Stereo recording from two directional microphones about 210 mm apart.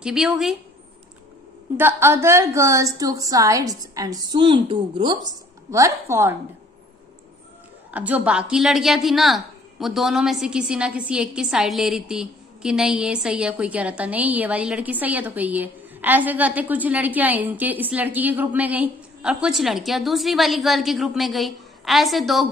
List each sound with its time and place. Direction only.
0.0 s a woman's voice: 5° right (ahead or behind)
1.8 s a woman's voice: 10° right (ahead or behind)
7.9 s a woman's voice: 5° right (ahead or behind)